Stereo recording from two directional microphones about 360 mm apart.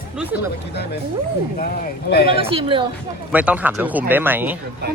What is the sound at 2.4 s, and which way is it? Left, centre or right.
Speech, centre.